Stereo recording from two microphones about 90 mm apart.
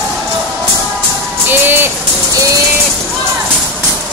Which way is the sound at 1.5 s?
25° right (ahead or behind).